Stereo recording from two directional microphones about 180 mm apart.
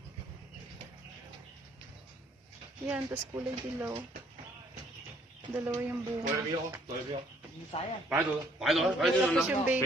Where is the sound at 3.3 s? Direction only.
15° right (ahead or behind).